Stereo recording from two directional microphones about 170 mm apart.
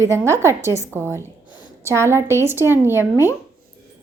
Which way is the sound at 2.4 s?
15° right (ahead or behind).